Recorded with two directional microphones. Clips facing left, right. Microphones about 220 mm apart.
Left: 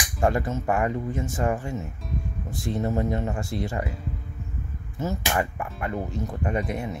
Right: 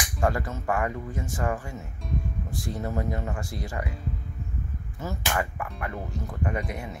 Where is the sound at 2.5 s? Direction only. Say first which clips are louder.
Left 6 dB; 25° left (ahead or behind).